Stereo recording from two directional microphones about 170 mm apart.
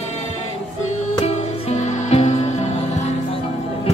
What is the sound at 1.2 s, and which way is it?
Music, 40° left (ahead or behind).